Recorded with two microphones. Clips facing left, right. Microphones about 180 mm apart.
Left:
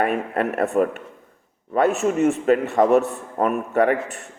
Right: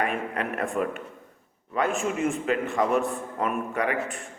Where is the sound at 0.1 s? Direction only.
40° left (ahead or behind).